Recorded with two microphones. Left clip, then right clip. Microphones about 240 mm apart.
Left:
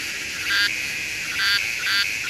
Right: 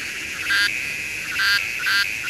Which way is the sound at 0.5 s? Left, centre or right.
Centre.